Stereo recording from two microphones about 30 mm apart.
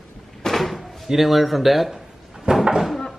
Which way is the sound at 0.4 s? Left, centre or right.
Centre.